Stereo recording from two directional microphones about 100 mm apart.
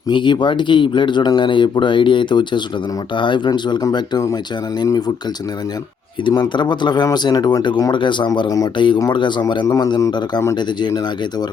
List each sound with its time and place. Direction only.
0.1 s speech: 50° left (ahead or behind)
4.9 s speech: 45° left (ahead or behind)
6.2 s speech: 45° left (ahead or behind)
8.4 s a man's voice: 35° left (ahead or behind)
9.1 s speech: 50° left (ahead or behind)
9.6 s a man's voice: 35° left (ahead or behind)